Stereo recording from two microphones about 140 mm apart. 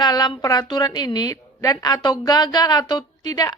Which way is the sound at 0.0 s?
30° left (ahead or behind).